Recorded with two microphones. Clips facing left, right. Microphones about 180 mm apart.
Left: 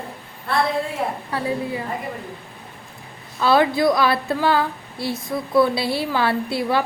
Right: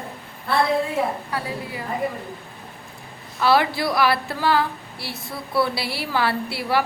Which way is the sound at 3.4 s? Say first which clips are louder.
Left 3 dB; 20° left (ahead or behind).